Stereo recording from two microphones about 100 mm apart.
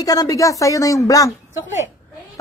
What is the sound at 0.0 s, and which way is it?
A woman's voice, 40° left (ahead or behind).